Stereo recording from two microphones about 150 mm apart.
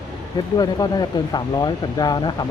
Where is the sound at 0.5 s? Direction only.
30° left (ahead or behind).